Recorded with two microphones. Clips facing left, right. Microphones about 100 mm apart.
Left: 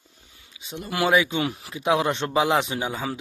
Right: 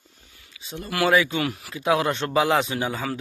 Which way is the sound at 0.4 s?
20° left (ahead or behind).